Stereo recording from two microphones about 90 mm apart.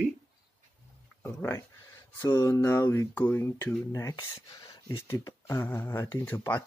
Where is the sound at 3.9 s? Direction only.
40° left (ahead or behind).